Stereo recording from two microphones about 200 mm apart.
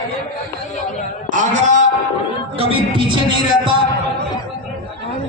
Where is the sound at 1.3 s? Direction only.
40° right (ahead or behind).